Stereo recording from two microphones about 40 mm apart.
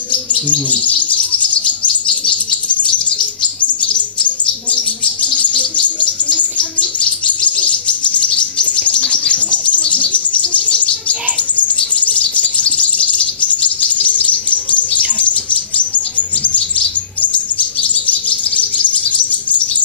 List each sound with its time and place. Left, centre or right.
0.1 s bird: left
4.6 s bird: left
6.8 s chirp: left
9.0 s bird: centre
9.3 s bird: left